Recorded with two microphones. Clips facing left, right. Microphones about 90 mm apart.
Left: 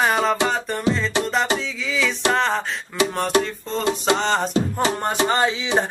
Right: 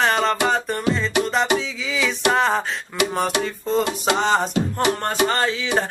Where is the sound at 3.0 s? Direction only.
30° left (ahead or behind).